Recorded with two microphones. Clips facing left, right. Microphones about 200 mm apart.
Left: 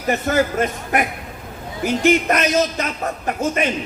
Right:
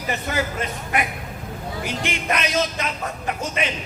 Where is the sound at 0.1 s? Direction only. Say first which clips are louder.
Left 7 dB; 45° left (ahead or behind).